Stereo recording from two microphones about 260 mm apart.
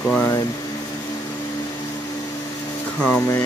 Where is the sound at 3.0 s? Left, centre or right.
Centre.